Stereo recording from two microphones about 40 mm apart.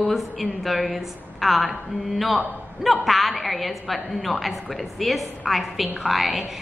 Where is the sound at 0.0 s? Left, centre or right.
Centre.